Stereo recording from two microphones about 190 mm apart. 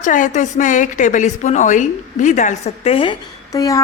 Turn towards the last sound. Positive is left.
turn(degrees=20)  # may be behind; listen again after turning